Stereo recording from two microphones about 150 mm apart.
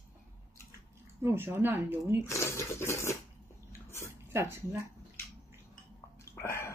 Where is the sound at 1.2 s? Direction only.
15° right (ahead or behind).